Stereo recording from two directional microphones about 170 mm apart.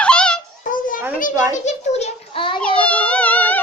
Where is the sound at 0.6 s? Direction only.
50° left (ahead or behind).